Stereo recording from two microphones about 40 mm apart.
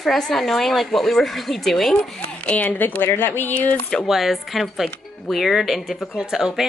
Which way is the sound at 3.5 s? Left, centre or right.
Left.